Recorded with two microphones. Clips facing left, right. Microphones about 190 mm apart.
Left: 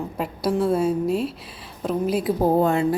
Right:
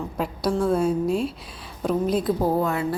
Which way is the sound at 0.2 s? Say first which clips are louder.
Left 1 dB; 5° left (ahead or behind).